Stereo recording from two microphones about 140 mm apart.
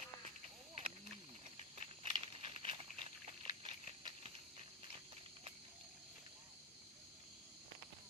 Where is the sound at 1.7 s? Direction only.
45° right (ahead or behind).